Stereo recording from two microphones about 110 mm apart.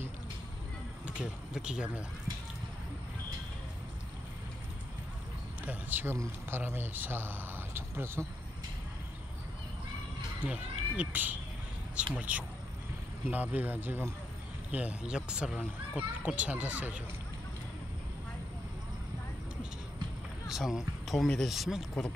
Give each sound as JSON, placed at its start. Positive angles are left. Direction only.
{"t": 1.0, "sound": "speech", "side_deg": -10}
{"t": 5.7, "sound": "a sound", "side_deg": -15}
{"t": 6.1, "sound": "speech", "side_deg": -20}
{"t": 10.4, "sound": "speech", "side_deg": -15}
{"t": 20.4, "sound": "speech", "side_deg": -5}